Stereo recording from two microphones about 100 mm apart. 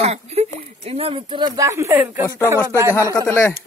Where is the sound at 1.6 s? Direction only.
30° right (ahead or behind).